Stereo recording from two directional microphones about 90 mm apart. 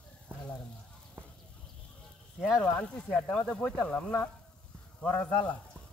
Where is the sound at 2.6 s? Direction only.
10° left (ahead or behind).